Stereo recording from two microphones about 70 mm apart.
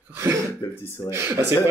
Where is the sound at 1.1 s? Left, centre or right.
Right.